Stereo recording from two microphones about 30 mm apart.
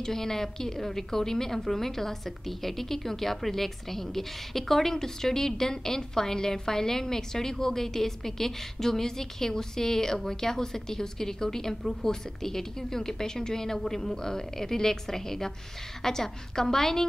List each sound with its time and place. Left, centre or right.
0.0 s a woman's voice: centre